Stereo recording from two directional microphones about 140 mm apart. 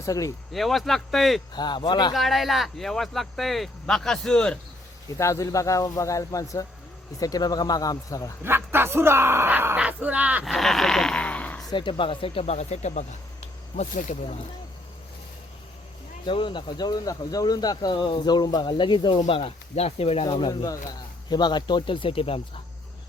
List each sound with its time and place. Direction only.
0.0 s speech: 25° left (ahead or behind)
0.5 s speech: centre (ahead or behind)
1.5 s speech: 30° left (ahead or behind)
2.1 s speech: centre (ahead or behind)
5.0 s speech: 20° left (ahead or behind)
8.4 s speech: 15° right (ahead or behind)
10.4 s speech: centre (ahead or behind)
11.7 s speech: 35° left (ahead or behind); by 14.3 s 55° left (ahead or behind)
16.2 s speech: 35° left (ahead or behind)